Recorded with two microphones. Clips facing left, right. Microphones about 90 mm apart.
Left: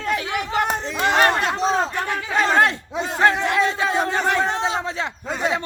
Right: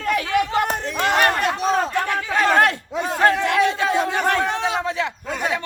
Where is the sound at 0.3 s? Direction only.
20° left (ahead or behind).